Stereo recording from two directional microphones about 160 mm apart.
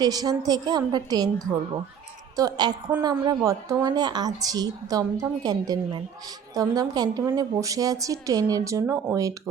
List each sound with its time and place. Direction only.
0.0 s a woman's voice: 25° right (ahead or behind)